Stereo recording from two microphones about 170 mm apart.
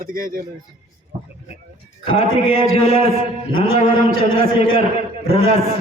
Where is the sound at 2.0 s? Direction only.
35° left (ahead or behind).